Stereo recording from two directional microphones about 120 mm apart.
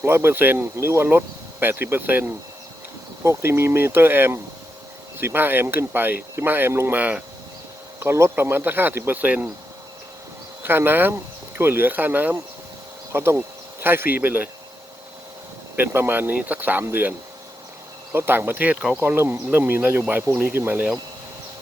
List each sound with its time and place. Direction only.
0.0 s speech: 20° right (ahead or behind)
10.6 s speech: 20° right (ahead or behind)
15.7 s speech: 15° right (ahead or behind)